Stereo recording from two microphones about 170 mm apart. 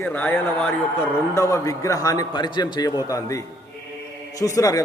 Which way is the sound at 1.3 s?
20° left (ahead or behind).